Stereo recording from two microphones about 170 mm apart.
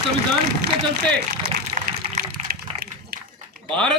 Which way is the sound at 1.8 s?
50° right (ahead or behind).